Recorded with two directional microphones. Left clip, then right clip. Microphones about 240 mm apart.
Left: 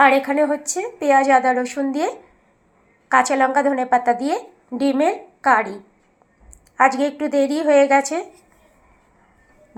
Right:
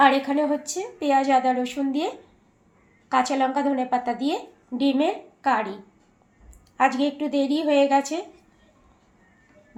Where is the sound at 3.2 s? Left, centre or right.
Left.